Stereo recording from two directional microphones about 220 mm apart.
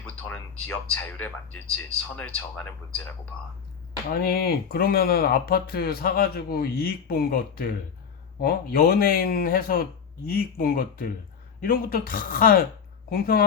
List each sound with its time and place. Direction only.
0.0 s speech: 10° left (ahead or behind)
4.1 s speech: 45° left (ahead or behind)